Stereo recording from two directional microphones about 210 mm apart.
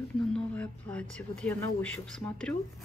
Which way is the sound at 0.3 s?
5° left (ahead or behind).